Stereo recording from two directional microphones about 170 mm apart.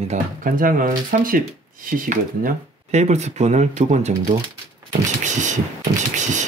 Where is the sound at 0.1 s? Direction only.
55° right (ahead or behind).